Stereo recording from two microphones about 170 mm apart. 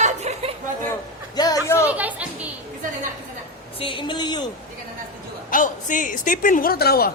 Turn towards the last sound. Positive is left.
turn(degrees=65)  # may be behind; listen again after turning